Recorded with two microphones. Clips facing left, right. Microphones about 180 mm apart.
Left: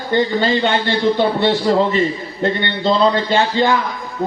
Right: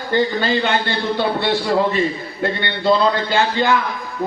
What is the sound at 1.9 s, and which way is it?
Speech, 20° left (ahead or behind).